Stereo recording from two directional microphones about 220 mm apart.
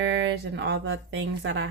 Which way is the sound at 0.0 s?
50° right (ahead or behind).